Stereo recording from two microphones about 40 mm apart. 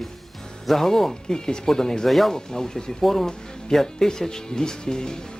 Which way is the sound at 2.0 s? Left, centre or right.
Centre.